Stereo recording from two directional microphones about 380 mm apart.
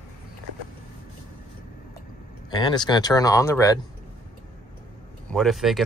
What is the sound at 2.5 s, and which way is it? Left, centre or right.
Speech, centre.